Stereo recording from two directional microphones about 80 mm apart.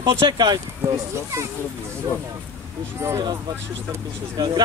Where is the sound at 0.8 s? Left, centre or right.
Right.